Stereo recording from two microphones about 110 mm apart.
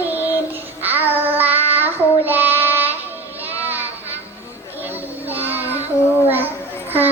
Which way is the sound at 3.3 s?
15° right (ahead or behind).